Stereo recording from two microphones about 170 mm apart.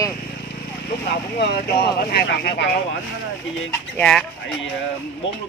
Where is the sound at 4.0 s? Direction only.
5° left (ahead or behind).